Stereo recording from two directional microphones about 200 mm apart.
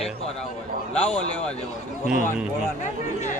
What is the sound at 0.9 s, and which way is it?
Speech, 5° left (ahead or behind).